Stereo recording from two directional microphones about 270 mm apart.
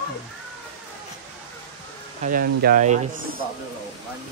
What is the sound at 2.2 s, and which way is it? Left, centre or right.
Speech, right.